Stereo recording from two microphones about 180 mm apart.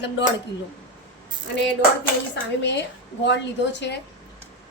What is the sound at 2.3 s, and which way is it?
A woman's voice, 75° left (ahead or behind).